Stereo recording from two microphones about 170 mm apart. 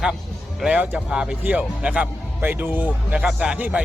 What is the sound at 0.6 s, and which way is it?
A man's voice, 5° right (ahead or behind).